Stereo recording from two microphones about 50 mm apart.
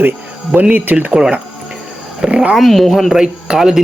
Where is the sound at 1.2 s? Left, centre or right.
Right.